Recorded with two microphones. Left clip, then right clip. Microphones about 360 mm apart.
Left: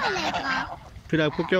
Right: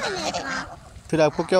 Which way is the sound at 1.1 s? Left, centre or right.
Centre.